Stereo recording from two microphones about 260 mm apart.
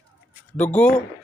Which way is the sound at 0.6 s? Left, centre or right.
Centre.